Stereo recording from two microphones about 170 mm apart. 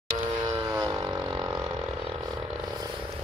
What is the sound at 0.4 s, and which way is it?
Vehicle, 25° right (ahead or behind).